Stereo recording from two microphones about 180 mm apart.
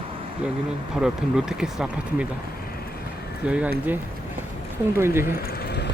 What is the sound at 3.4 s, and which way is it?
Speech, 5° right (ahead or behind).